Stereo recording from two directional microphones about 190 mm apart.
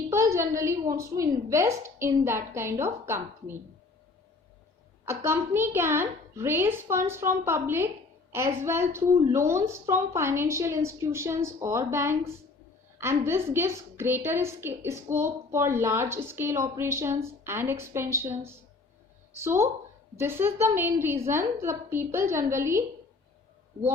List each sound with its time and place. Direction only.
0.1 s a sound: 15° right (ahead or behind)
0.5 s a woman's voice: 15° right (ahead or behind)
5.0 s a woman's voice: 15° right (ahead or behind)